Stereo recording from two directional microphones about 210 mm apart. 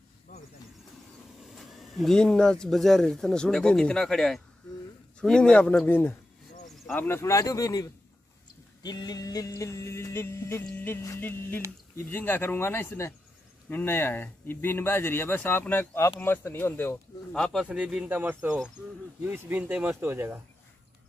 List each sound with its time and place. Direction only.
0.3 s a sound: 40° left (ahead or behind)
1.4 s speech: centre (ahead or behind)
6.9 s music: 10° left (ahead or behind)
16.2 s speech: 10° left (ahead or behind); by 20.3 s 10° right (ahead or behind)